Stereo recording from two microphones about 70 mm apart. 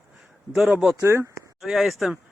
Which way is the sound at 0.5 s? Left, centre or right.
Centre.